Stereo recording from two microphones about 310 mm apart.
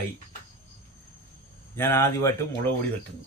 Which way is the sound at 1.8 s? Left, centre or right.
Centre.